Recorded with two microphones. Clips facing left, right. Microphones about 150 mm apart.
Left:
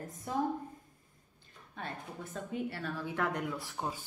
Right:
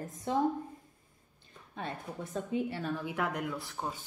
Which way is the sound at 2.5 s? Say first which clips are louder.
Right 3 dB; 20° right (ahead or behind).